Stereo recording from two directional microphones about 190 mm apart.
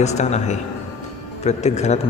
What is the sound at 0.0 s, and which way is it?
A man's voice, 35° left (ahead or behind).